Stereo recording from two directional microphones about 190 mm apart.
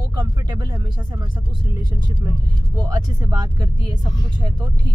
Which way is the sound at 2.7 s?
20° right (ahead or behind).